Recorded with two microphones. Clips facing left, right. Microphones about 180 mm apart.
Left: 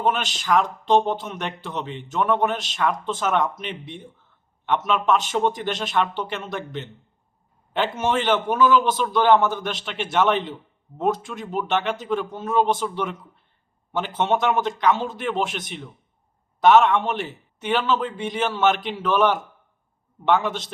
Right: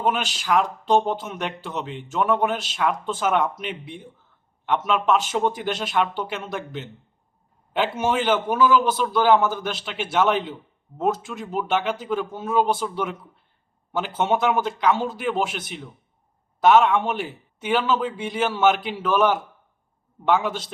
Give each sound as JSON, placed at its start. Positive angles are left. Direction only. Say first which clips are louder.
{"t": 0.0, "sound": "a man's voice", "louder": "even", "side_deg": -10}